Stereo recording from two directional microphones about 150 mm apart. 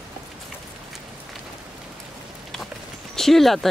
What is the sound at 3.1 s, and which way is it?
Speech, centre (ahead or behind).